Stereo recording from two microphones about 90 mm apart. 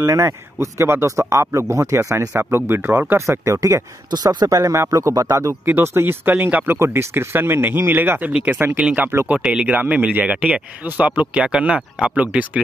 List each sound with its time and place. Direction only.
0.0 s speech: 35° right (ahead or behind)
4.1 s speech: 50° right (ahead or behind); by 5.6 s 35° right (ahead or behind)
5.7 s speech: 25° right (ahead or behind)